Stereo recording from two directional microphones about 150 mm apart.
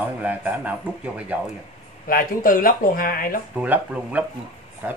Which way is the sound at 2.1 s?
70° left (ahead or behind).